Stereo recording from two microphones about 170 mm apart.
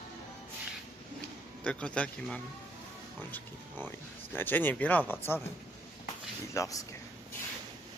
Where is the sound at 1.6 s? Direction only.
5° left (ahead or behind).